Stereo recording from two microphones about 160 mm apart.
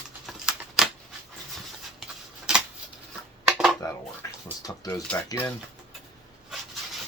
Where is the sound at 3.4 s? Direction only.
5° right (ahead or behind).